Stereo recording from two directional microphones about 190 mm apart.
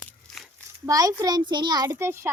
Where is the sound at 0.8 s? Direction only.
20° right (ahead or behind).